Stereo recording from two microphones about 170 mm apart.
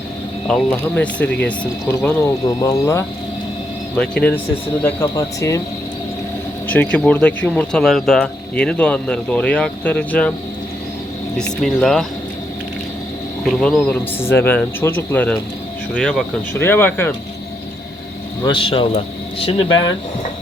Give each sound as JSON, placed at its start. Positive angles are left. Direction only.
{"t": 0.4, "sound": "speech", "side_deg": 5}
{"t": 3.9, "sound": "speech", "side_deg": 5}
{"t": 6.7, "sound": "speech", "side_deg": 10}
{"t": 11.6, "sound": "speech", "side_deg": 0}
{"t": 13.4, "sound": "speech", "side_deg": 0}
{"t": 18.4, "sound": "speech", "side_deg": 30}